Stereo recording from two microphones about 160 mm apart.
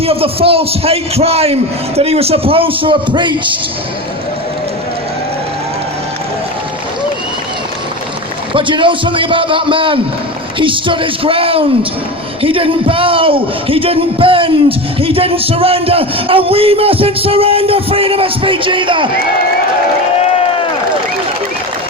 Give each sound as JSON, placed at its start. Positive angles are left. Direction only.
{"t": 0.0, "sound": "speech", "side_deg": -35}
{"t": 8.5, "sound": "speech", "side_deg": -30}